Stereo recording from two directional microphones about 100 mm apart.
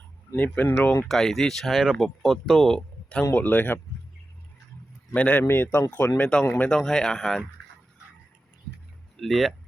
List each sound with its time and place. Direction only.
0.3 s speech: 15° left (ahead or behind)
1.0 s speech: centre (ahead or behind)
3.3 s speech: 20° left (ahead or behind)
5.1 s speech: 15° left (ahead or behind)
6.7 s speech: 5° left (ahead or behind)
9.1 s speech: centre (ahead or behind)